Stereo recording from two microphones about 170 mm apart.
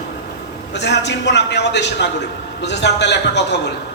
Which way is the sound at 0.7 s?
90° left.